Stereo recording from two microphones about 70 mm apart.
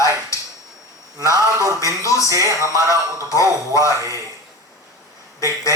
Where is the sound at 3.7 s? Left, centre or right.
Left.